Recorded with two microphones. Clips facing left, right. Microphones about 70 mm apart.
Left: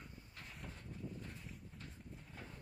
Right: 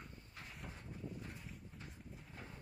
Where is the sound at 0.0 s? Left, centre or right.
Centre.